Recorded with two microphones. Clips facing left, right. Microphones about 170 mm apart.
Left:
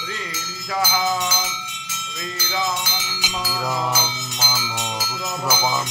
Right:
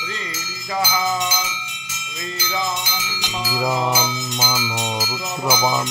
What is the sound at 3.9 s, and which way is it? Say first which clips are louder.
Music: right 4 dB; 20° right (ahead or behind).